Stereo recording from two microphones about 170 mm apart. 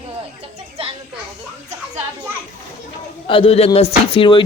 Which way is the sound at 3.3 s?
35° left (ahead or behind).